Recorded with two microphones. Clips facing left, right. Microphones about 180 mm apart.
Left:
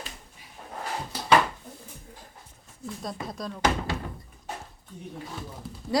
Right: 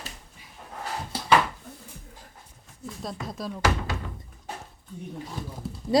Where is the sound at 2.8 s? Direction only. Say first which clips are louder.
Even; centre (ahead or behind).